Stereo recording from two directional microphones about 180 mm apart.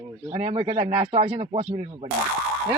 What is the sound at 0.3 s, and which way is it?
Speech, 40° right (ahead or behind).